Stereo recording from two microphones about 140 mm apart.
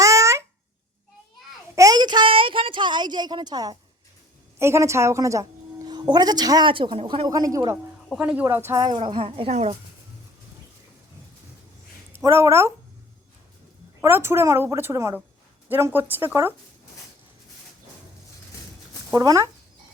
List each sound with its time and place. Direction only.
0.0 s a sound: 20° right (ahead or behind)
1.7 s a sound: 25° right (ahead or behind)
4.6 s a woman's voice: 20° right (ahead or behind); by 7.3 s 45° right (ahead or behind)
7.3 s a woman's voice: 25° right (ahead or behind)
8.1 s a woman's voice: 10° right (ahead or behind); by 9.0 s 25° right (ahead or behind)
9.0 s speech: 40° right (ahead or behind)
12.1 s speech: 15° right (ahead or behind)
14.0 s a woman's voice: 15° right (ahead or behind)
19.1 s a woman's voice: 25° right (ahead or behind)